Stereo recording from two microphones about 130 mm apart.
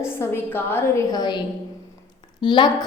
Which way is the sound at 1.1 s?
30° left (ahead or behind).